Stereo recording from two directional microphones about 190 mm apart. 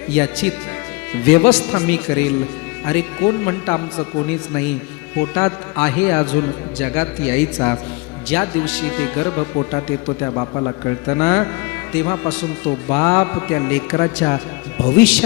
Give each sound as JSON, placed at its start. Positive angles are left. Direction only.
{"t": 0.1, "sound": "a man's voice", "side_deg": 5}